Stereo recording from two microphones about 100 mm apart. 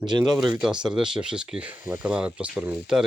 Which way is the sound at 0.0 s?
50° right (ahead or behind).